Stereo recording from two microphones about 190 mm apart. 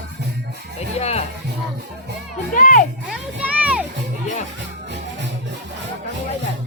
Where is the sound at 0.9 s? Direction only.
35° left (ahead or behind).